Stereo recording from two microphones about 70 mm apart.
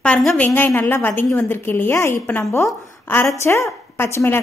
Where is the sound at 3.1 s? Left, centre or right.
Left.